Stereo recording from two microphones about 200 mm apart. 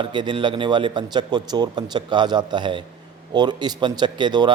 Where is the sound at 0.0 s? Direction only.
20° right (ahead or behind).